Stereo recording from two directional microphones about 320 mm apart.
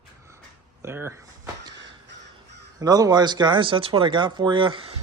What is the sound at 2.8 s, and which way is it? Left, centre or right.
Speech, centre.